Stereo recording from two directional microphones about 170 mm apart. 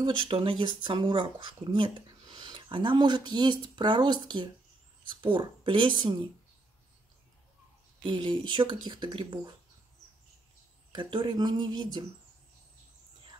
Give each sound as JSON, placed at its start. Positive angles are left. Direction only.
{"t": 0.0, "sound": "speech", "side_deg": -30}
{"t": 8.0, "sound": "speech", "side_deg": -25}
{"t": 10.9, "sound": "speech", "side_deg": -30}